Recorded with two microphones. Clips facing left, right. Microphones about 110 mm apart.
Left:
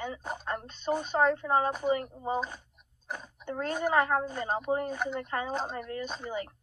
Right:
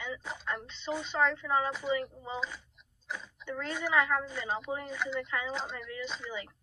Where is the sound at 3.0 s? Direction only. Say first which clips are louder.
Left 2 dB; 50° left (ahead or behind).